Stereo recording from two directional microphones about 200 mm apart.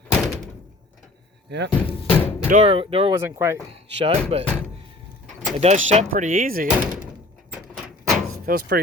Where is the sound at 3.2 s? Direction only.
15° right (ahead or behind).